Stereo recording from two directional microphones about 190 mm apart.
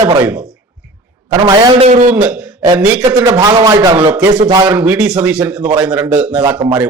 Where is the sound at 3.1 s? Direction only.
20° right (ahead or behind).